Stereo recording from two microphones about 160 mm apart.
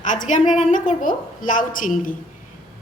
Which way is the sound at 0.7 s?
55° left (ahead or behind).